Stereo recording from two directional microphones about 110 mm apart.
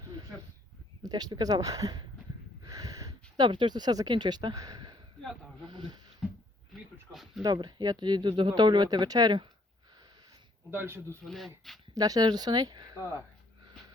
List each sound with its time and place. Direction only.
1.0 s speech: 40° right (ahead or behind)
5.6 s a sound: 45° right (ahead or behind)
6.2 s a sound: 5° right (ahead or behind)
7.4 s speech: 40° right (ahead or behind)
10.7 s speech: 20° right (ahead or behind)
11.2 s speech: centre (ahead or behind)
11.9 s speech: 35° right (ahead or behind)